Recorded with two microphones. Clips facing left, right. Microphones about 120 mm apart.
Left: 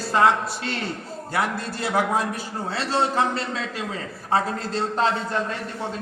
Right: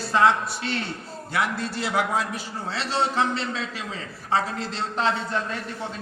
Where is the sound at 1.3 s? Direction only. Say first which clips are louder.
Even; 45° left (ahead or behind).